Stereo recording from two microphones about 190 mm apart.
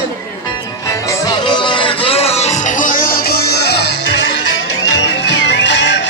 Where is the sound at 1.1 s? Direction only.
20° left (ahead or behind).